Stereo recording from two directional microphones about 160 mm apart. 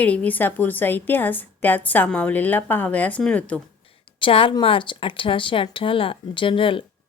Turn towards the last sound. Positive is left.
turn(degrees=35)  # may be behind; listen again after turning